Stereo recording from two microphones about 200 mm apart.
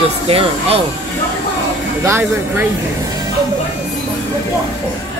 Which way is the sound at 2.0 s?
10° right (ahead or behind).